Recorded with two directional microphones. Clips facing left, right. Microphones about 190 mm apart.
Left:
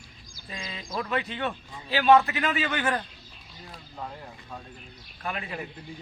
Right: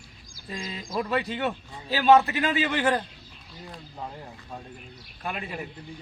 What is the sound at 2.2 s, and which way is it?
Speech, 30° right (ahead or behind).